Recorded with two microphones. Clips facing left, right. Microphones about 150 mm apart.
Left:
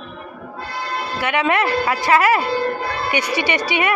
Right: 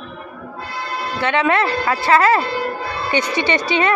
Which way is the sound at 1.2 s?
15° left (ahead or behind).